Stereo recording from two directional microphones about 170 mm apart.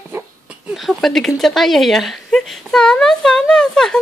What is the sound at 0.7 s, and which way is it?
Speech, centre (ahead or behind).